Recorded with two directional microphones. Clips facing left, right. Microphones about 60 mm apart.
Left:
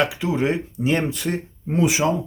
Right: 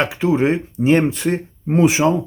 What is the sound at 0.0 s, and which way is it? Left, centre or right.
Speech, right.